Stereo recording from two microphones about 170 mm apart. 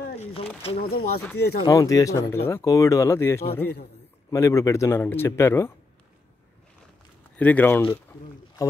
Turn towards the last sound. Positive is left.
turn(degrees=10)  # may be behind; listen again after turning